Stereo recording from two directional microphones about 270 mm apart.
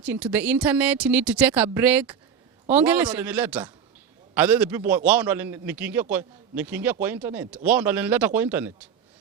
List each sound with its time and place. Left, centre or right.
0.0 s a man's voice: centre